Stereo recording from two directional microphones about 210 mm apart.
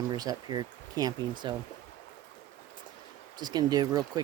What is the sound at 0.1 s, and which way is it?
Speech, 20° right (ahead or behind).